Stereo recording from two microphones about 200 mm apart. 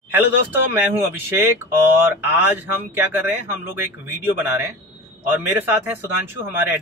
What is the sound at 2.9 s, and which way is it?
Speech, 10° right (ahead or behind).